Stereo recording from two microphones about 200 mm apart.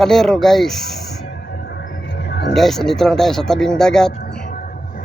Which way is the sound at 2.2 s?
55° left (ahead or behind).